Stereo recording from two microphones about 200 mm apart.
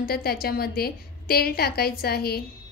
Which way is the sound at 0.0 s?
50° left (ahead or behind).